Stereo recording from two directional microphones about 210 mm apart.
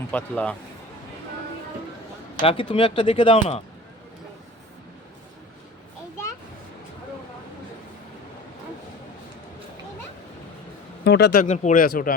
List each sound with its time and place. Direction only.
0.1 s speech: 5° left (ahead or behind)
2.4 s speech: 25° left (ahead or behind)
11.0 s speech: 50° left (ahead or behind)
11.4 s speech: 35° left (ahead or behind)